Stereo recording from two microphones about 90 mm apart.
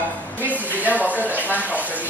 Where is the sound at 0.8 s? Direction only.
20° right (ahead or behind).